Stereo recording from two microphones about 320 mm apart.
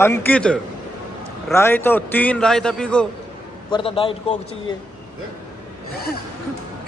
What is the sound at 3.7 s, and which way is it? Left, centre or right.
Speech, centre.